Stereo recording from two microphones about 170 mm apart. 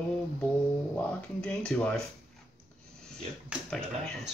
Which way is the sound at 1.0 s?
5° left (ahead or behind).